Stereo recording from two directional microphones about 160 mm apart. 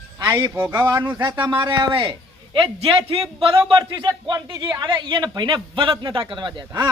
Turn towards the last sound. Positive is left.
turn(degrees=-30)  # may be behind; listen again after turning